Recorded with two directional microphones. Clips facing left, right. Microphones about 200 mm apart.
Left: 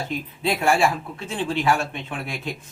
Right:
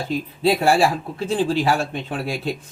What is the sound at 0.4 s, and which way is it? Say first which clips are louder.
Speech: right 3 dB; 35° right (ahead or behind).